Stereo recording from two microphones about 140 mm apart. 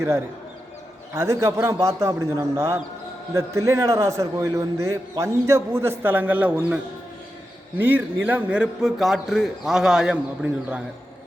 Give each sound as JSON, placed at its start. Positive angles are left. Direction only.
{"t": 1.1, "sound": "a man's voice", "side_deg": -20}
{"t": 7.8, "sound": "a man's voice", "side_deg": -15}